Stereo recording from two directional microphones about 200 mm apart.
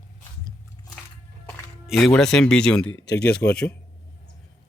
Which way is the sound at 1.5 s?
Centre (ahead or behind).